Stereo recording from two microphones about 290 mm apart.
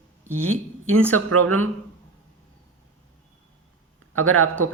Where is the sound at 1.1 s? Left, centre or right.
Right.